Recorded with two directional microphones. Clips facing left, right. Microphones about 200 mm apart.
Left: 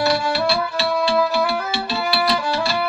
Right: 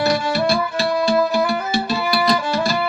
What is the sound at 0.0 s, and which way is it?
Music, 45° right (ahead or behind).